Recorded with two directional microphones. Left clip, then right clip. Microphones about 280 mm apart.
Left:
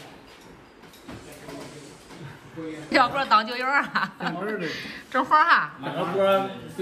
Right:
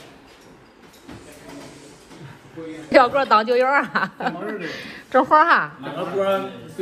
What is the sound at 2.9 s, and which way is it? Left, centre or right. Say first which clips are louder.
A man's voice: right 5 dB; centre.